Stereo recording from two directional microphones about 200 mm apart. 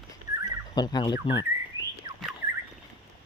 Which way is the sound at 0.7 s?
20° left (ahead or behind).